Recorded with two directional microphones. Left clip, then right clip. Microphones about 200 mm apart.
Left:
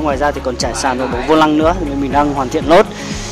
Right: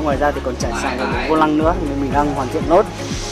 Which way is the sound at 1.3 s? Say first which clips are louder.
Left 5 dB; 20° left (ahead or behind).